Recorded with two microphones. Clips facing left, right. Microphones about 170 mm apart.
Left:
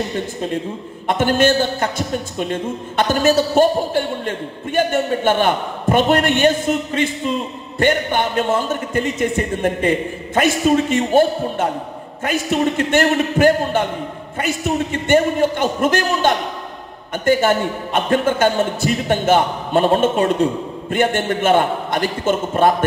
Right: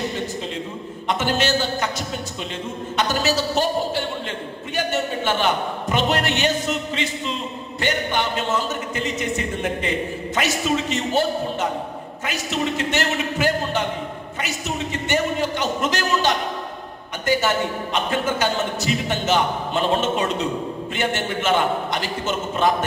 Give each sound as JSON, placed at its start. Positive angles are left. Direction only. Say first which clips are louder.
{"t": 1.0, "sound": "a man's voice", "louder": "left 7 dB", "side_deg": 50}